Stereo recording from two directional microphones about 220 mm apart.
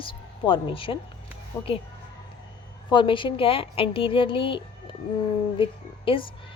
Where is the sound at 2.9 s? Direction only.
20° left (ahead or behind).